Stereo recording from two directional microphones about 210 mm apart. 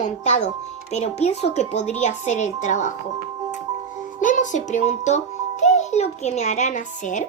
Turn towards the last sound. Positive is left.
turn(degrees=35)  # may be behind; listen again after turning